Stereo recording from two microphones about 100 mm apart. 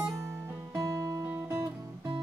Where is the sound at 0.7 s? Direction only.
30° right (ahead or behind).